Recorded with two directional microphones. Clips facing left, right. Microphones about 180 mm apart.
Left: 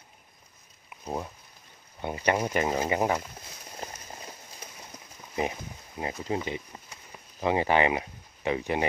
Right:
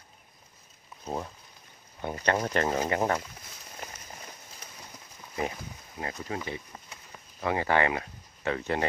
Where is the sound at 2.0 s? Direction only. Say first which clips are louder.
Left 1 dB; 15° left (ahead or behind).